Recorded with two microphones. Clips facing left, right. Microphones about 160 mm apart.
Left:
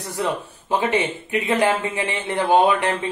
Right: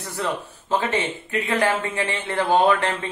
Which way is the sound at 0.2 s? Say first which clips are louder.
Left 2 dB; 15° left (ahead or behind).